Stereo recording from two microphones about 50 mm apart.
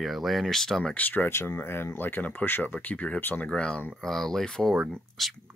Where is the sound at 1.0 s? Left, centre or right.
Left.